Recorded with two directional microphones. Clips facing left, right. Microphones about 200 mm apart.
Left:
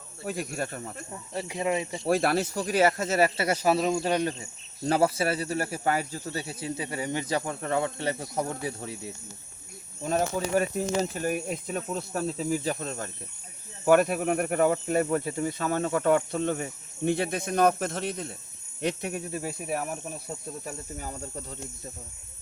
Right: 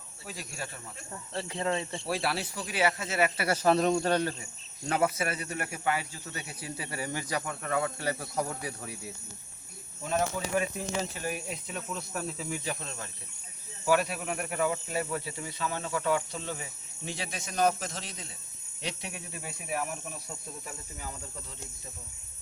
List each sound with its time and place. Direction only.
0.3 s speech: 55° left (ahead or behind)
1.1 s speech: 15° left (ahead or behind)
2.0 s speech: 50° left (ahead or behind)
3.4 s speech: 15° left (ahead or behind)
4.8 s speech: 35° left (ahead or behind)
10.0 s speech: 40° left (ahead or behind)
12.8 s speech: 45° left (ahead or behind)
20.7 s cricket: 40° left (ahead or behind)